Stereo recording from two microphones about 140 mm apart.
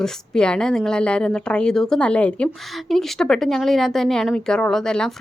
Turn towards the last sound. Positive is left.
turn(degrees=5)  # may be behind; listen again after turning